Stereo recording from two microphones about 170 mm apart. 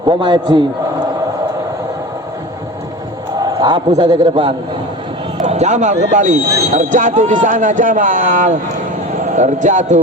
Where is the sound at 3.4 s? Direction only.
25° right (ahead or behind).